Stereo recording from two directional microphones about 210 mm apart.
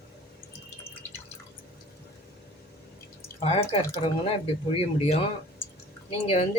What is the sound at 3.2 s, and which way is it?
Drip, 30° left (ahead or behind).